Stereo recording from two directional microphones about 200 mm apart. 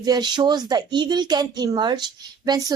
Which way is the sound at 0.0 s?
20° right (ahead or behind).